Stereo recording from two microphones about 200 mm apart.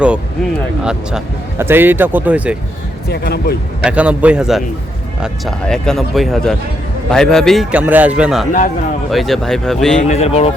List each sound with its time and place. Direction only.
0.9 s speech: 10° right (ahead or behind)
3.1 s speech: 50° left (ahead or behind)
3.8 s speech: 5° right (ahead or behind)
10.0 s speech: 35° left (ahead or behind)